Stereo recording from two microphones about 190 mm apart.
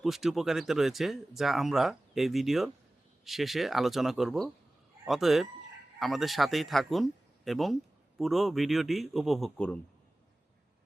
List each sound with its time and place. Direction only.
0.0 s speech: centre (ahead or behind)